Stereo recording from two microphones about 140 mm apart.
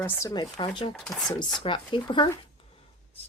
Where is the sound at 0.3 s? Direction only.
30° left (ahead or behind).